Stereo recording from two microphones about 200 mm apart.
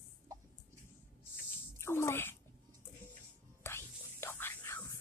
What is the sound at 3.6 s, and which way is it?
Whispering, 10° left (ahead or behind).